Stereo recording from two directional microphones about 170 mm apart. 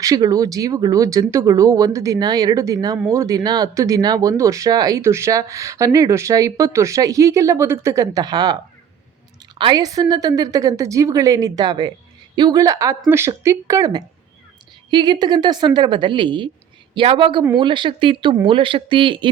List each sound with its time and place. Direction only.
0.0 s speech: 20° right (ahead or behind)